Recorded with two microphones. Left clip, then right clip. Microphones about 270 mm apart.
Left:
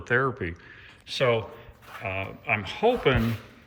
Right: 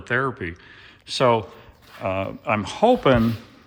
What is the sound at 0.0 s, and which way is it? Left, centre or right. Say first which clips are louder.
Speech: right 1 dB; centre.